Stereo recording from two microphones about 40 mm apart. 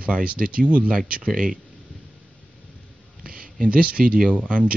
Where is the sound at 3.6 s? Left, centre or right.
Right.